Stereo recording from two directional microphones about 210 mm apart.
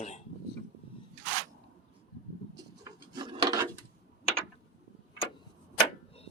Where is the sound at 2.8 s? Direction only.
20° right (ahead or behind).